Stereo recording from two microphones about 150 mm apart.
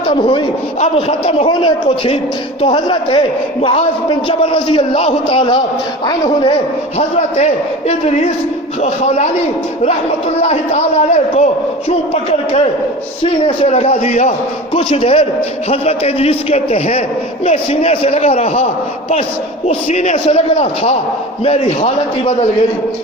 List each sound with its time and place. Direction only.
0.1 s a man's voice: 35° left (ahead or behind)
7.2 s a man's voice: 50° left (ahead or behind)
10.4 s a man's voice: 45° left (ahead or behind)